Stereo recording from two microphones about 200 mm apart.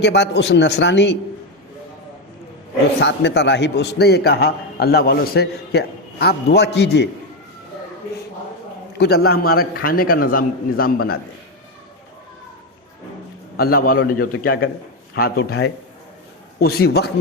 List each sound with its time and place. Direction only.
0.0 s a man's voice: 60° left (ahead or behind)
3.0 s a man's voice: 60° left (ahead or behind)
9.0 s a man's voice: 55° left (ahead or behind)
13.6 s a man's voice: 45° left (ahead or behind)